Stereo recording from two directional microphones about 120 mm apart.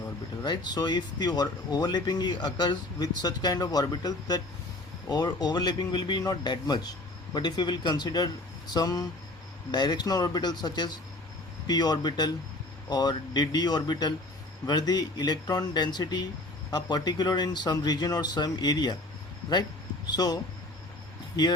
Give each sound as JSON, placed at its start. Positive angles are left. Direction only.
{"t": 0.4, "sound": "speech", "side_deg": 35}
{"t": 20.1, "sound": "speech", "side_deg": 35}